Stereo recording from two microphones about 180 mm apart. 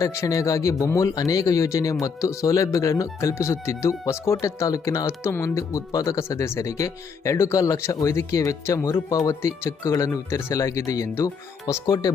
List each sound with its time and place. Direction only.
0.0 s a man's voice: 15° left (ahead or behind)